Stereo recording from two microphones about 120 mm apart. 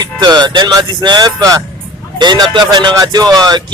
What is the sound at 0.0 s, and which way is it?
Speech, 35° right (ahead or behind).